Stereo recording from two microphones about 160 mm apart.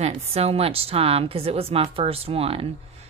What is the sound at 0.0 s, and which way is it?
A woman's voice, 40° right (ahead or behind).